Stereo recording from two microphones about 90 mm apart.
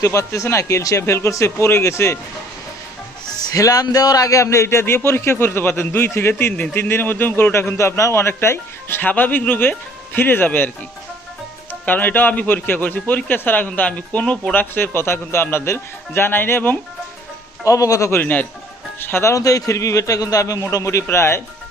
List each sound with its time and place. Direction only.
0.0 s a man's voice: 35° left (ahead or behind)
3.5 s a man's voice: 40° left (ahead or behind); by 10.7 s 25° left (ahead or behind)
11.7 s a man's voice: 20° left (ahead or behind)
17.7 s a man's voice: 40° left (ahead or behind)
18.2 s a man's voice: 20° left (ahead or behind)